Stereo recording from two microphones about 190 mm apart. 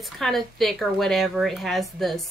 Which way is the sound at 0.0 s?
Centre (ahead or behind).